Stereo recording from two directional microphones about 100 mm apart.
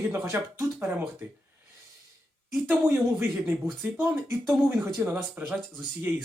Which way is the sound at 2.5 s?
20° right (ahead or behind).